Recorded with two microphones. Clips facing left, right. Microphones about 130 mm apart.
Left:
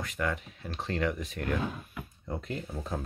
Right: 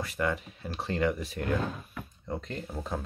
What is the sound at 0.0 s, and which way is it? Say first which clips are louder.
Speech: right 2 dB; centre (ahead or behind).